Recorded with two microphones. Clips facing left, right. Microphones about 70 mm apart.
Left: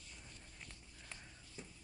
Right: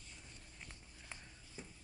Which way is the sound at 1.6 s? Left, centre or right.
Right.